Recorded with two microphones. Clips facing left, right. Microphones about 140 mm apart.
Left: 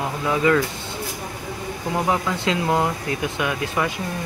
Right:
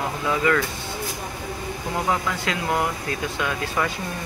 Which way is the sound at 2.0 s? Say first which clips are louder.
Left 2 dB; 20° left (ahead or behind).